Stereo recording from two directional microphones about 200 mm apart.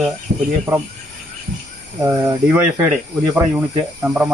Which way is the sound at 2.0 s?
10° right (ahead or behind).